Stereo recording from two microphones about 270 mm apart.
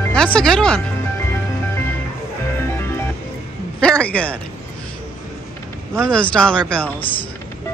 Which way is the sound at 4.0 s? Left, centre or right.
Centre.